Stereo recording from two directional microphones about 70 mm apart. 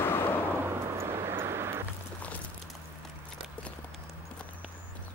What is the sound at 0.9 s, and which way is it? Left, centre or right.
Vehicle, right.